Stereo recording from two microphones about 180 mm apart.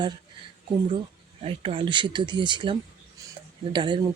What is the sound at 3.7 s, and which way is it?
Speech, 25° right (ahead or behind).